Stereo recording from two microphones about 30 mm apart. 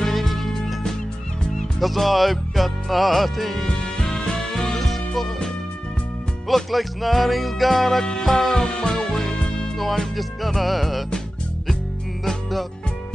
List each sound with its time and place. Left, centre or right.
0.0 s music: centre
1.8 s music: centre
3.6 s music: left
4.7 s music: centre
8.0 s music: centre
8.3 s music: centre
9.3 s music: left
9.8 s music: centre